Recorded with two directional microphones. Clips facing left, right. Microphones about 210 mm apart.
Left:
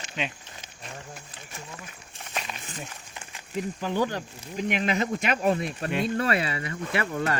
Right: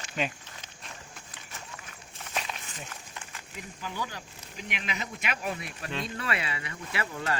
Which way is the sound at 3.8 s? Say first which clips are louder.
Left 10 dB; 55° left (ahead or behind).